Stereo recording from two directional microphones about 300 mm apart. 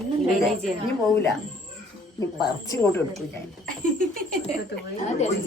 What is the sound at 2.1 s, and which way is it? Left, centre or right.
Speech, centre.